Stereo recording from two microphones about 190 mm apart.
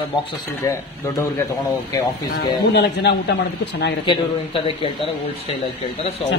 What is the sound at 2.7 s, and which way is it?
Speech, 60° left (ahead or behind).